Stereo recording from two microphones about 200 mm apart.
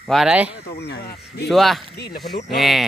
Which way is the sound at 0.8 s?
55° left (ahead or behind).